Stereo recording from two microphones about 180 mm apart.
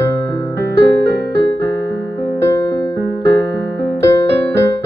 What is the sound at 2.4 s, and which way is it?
Music, 15° left (ahead or behind).